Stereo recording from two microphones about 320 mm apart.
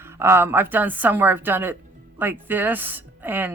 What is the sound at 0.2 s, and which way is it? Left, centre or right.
Speech, centre.